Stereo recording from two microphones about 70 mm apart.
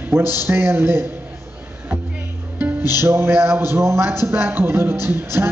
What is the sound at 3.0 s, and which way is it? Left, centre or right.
Speech, right.